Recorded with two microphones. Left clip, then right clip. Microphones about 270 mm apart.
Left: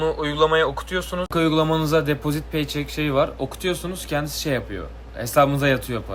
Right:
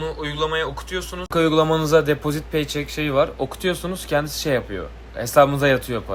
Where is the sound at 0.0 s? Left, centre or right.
Centre.